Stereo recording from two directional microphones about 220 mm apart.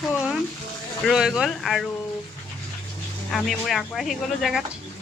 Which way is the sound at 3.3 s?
Centre (ahead or behind).